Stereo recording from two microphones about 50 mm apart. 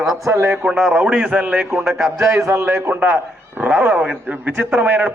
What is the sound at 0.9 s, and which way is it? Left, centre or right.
Speech, right.